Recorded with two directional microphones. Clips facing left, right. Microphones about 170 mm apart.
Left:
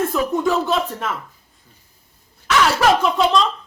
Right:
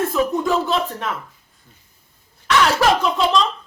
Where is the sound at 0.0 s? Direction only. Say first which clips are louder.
Even; centre (ahead or behind).